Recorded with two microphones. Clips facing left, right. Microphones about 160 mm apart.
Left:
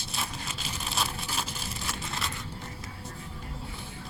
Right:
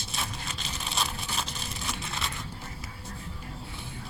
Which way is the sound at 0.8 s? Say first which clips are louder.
Even; 5° left (ahead or behind).